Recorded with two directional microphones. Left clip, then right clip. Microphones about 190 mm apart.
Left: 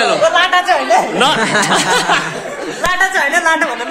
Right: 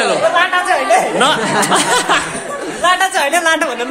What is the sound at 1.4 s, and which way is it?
Speech, 40° left (ahead or behind).